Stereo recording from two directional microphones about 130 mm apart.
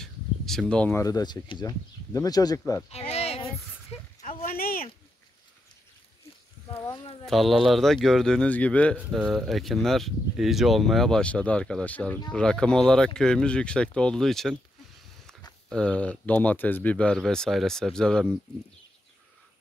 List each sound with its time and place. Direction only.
0.0 s a sound: 5° left (ahead or behind)
0.9 s speech: 30° left (ahead or behind)
2.9 s a sound: 50° left (ahead or behind)
7.2 s speech: centre (ahead or behind)
9.2 s speech: centre (ahead or behind)
15.7 s speech: 10° left (ahead or behind)